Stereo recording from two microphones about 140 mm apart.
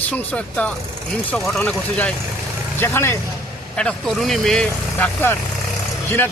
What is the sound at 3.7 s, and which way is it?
A man's voice, 5° left (ahead or behind).